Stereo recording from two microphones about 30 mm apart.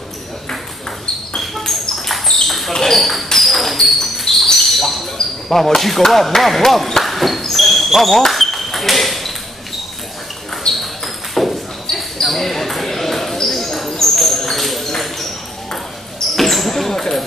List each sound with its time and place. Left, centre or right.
0.5 s ping: centre
1.6 s ping: centre
2.4 s basketball bounce: centre
2.7 s speech: centre
3.3 s a sound: centre
3.8 s basketball bounce: centre
5.1 s speech: centre
7.0 s basketball bounce: centre
8.3 s ping: centre
10.7 s a sound: left
11.4 s basketball bounce: centre
14.1 s a sound: centre
14.9 s ping: centre
16.3 s basketball bounce: centre